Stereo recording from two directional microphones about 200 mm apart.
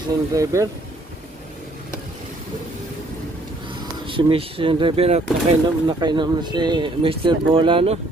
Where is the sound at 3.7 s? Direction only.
25° right (ahead or behind).